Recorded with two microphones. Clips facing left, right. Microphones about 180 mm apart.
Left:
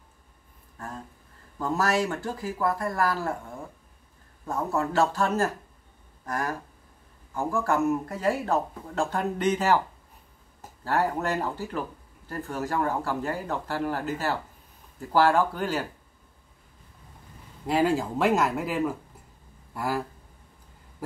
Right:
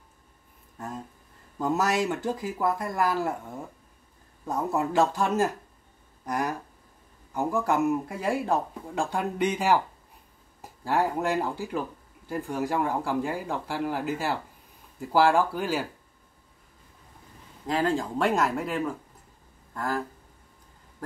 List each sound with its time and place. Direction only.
0.7 s speech: 20° right (ahead or behind)
4.5 s speech: 15° right (ahead or behind)
17.6 s speech: 10° left (ahead or behind)